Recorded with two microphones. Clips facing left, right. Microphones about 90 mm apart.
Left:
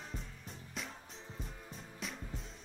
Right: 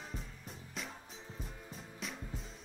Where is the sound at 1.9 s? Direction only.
Centre (ahead or behind).